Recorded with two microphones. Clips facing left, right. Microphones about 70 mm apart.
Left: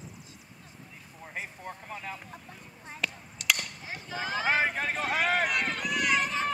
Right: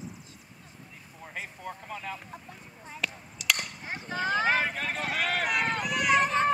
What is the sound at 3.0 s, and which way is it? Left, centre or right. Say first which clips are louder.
Chop: even; centre.